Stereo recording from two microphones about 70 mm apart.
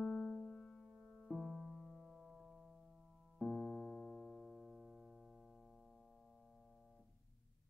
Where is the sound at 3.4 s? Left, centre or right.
Centre.